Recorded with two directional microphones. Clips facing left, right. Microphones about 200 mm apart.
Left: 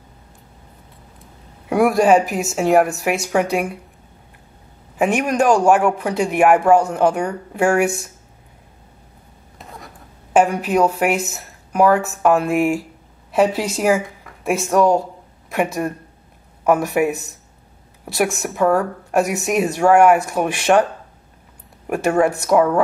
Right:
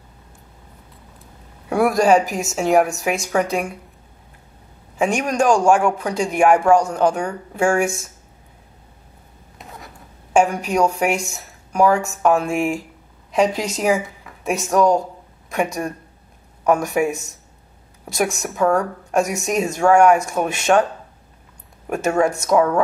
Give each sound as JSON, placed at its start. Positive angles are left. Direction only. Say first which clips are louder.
{"t": 1.7, "sound": "speech", "louder": "left 1 dB", "side_deg": 5}
{"t": 5.0, "sound": "speech", "louder": "left 1 dB", "side_deg": 5}
{"t": 9.6, "sound": "a sound", "louder": "left 1 dB", "side_deg": 0}
{"t": 10.3, "sound": "a woman's voice", "louder": "left 2 dB", "side_deg": 0}
{"t": 18.0, "sound": "speech", "louder": "left 2 dB", "side_deg": 0}
{"t": 21.8, "sound": "speech", "louder": "left 2 dB", "side_deg": 10}